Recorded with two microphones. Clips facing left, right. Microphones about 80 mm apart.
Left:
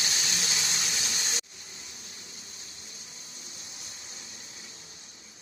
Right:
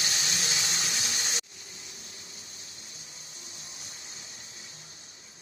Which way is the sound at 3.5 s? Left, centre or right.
Right.